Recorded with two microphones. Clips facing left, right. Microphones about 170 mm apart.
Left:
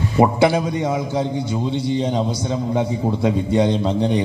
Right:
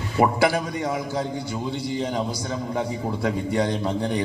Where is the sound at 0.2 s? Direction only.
25° left (ahead or behind).